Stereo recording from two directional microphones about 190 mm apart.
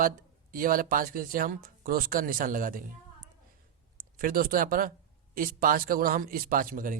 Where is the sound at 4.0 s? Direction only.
50° right (ahead or behind).